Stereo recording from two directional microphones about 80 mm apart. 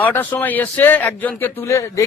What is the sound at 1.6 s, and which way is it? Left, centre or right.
Speech, left.